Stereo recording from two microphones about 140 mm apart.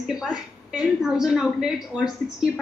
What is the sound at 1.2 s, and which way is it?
Speech, 5° right (ahead or behind).